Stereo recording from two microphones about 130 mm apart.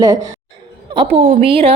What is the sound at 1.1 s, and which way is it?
Speech, 55° right (ahead or behind).